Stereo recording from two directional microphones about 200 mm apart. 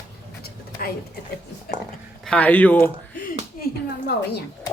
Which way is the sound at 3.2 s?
50° left (ahead or behind).